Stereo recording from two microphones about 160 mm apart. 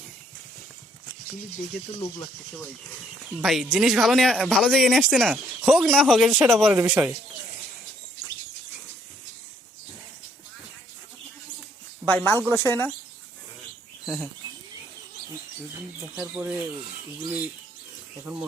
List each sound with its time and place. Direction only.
1.7 s speech: 80° left
3.4 s speech: centre (ahead or behind)
12.0 s speech: 10° left (ahead or behind)
14.0 s bird: 5° right (ahead or behind)
16.2 s speech: 10° right (ahead or behind)